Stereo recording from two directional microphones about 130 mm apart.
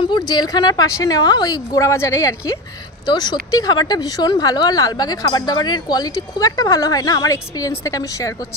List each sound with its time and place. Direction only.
0.0 s a woman's voice: 35° left (ahead or behind)